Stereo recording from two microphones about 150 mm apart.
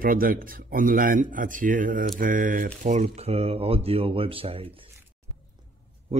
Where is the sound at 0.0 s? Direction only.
70° right (ahead or behind); by 4.6 s 40° right (ahead or behind).